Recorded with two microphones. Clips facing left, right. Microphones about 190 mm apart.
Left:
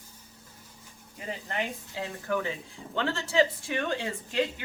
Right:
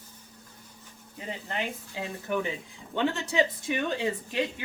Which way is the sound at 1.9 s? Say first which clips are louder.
Even; 20° right (ahead or behind).